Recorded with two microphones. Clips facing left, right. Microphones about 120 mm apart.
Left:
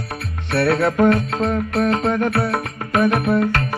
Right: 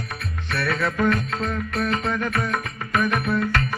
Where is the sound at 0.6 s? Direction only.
55° left (ahead or behind).